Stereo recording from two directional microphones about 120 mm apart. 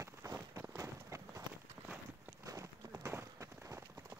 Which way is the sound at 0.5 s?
20° right (ahead or behind).